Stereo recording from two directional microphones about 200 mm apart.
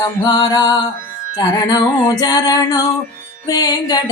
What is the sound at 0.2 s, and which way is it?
Music, 20° left (ahead or behind).